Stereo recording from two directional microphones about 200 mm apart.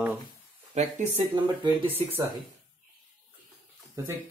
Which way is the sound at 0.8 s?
35° right (ahead or behind).